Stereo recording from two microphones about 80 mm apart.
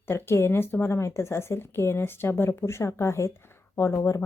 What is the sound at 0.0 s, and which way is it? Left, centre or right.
A woman's voice, left.